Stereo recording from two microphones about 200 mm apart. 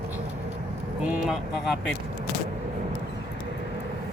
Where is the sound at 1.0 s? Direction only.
Centre (ahead or behind).